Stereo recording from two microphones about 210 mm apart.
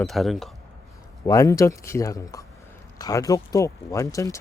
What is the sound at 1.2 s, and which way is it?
Speech, 15° left (ahead or behind).